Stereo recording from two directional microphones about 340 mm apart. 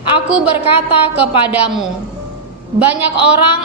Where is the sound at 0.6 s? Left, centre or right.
Centre.